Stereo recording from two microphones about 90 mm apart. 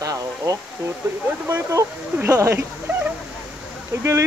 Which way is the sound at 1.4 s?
30° right (ahead or behind).